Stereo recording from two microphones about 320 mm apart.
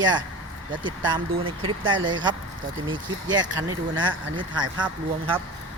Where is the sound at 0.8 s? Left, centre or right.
Centre.